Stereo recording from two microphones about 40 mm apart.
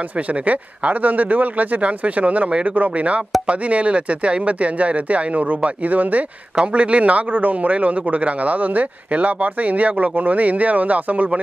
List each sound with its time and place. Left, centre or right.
0.3 s a man's voice: right